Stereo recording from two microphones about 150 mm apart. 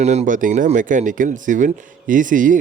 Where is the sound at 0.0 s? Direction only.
50° right (ahead or behind).